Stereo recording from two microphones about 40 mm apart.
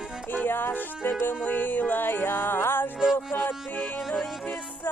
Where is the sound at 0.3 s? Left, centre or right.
Left.